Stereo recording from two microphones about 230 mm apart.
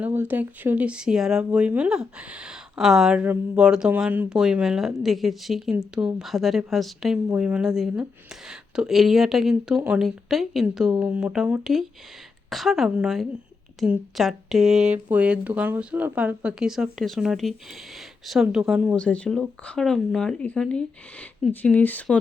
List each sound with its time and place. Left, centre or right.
0.0 s speech: centre